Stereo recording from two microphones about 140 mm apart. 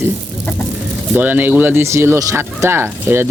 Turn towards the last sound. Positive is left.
turn(degrees=-15)  # may be behind; listen again after turning